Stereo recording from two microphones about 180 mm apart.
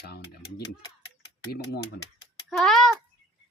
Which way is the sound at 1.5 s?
60° left (ahead or behind).